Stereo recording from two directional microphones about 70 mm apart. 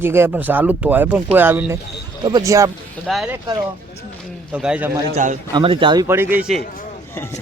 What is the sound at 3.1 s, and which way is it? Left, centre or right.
Speech, centre.